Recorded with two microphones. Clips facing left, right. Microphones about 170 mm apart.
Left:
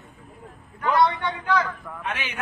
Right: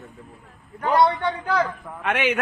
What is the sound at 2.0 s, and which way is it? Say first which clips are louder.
Speech: right 10 dB; 70° right (ahead or behind).